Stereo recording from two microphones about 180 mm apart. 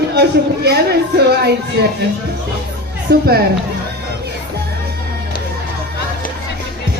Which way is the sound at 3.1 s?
60° right (ahead or behind).